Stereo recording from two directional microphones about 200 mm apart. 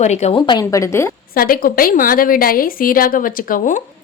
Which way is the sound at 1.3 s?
45° left (ahead or behind).